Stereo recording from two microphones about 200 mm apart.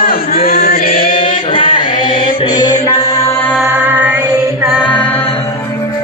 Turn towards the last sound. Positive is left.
turn(degrees=5)  # may be behind; listen again after turning